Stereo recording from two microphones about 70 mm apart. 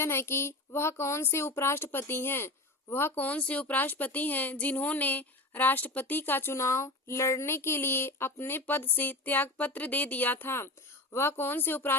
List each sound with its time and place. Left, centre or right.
0.0 s speech: left
3.2 s speech: centre